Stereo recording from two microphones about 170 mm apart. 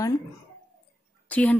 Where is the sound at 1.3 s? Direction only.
10° left (ahead or behind).